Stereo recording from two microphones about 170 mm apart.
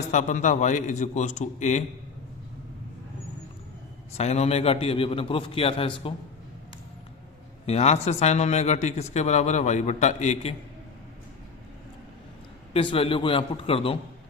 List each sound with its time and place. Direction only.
0.0 s a man's voice: 45° left (ahead or behind)
4.2 s speech: 40° left (ahead or behind)
7.7 s speech: 40° left (ahead or behind)
12.7 s speech: 30° left (ahead or behind)